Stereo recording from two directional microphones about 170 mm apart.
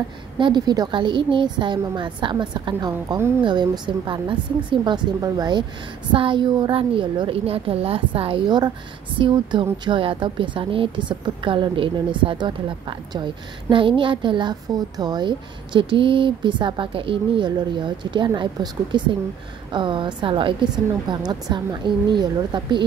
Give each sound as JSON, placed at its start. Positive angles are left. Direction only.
{"t": 0.4, "sound": "a woman's voice", "side_deg": -25}